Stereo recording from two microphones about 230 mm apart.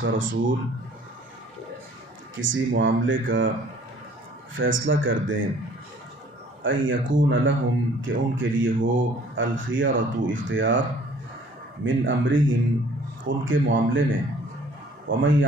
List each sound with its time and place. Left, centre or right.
0.0 s speech: right
2.3 s speech: right
4.6 s speech: right
6.6 s speech: right